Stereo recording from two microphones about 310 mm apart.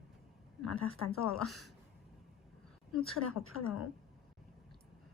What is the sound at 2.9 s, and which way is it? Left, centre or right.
Speech, left.